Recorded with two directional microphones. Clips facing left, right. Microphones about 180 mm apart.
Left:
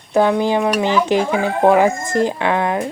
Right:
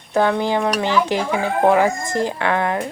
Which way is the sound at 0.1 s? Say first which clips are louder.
Left 3 dB; 15° left (ahead or behind).